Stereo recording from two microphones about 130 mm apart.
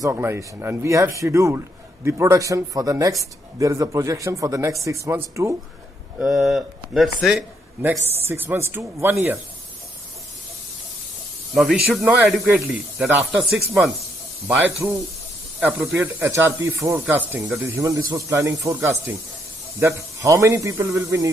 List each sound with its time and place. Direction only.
0.0 s speech: 20° right (ahead or behind)
6.1 s a man's voice: centre (ahead or behind)
7.8 s a man's voice: 15° right (ahead or behind)
11.5 s a man's voice: 5° right (ahead or behind)
15.6 s a man's voice: 15° right (ahead or behind)